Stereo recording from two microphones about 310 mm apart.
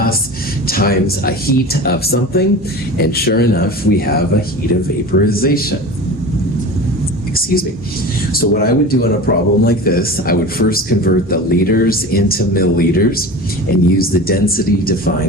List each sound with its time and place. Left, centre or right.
0.7 s speech: left
5.1 s speech: left
8.3 s speech: left